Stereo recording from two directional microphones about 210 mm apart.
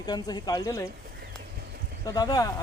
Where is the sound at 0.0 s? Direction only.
20° left (ahead or behind).